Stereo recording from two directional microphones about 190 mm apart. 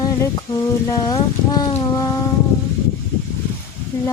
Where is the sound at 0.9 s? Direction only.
20° left (ahead or behind).